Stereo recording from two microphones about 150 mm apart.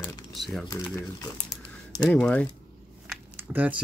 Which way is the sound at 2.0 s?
10° left (ahead or behind).